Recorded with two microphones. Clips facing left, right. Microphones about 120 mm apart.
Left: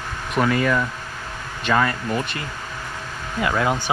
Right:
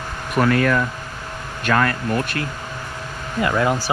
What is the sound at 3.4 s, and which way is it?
Speech, centre (ahead or behind).